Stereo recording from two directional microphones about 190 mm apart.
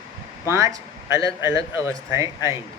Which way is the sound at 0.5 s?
15° right (ahead or behind).